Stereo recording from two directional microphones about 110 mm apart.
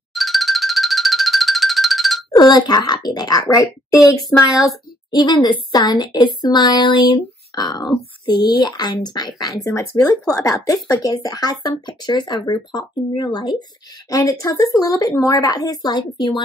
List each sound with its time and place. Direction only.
0.1 s music: centre (ahead or behind)
2.3 s speech: 40° left (ahead or behind)
14.1 s speech: 30° left (ahead or behind)